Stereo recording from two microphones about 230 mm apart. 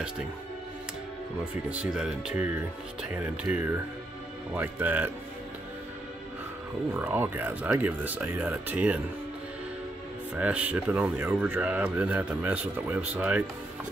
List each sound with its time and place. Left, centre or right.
1.7 s speech: centre
6.9 s speech: centre
10.3 s speech: centre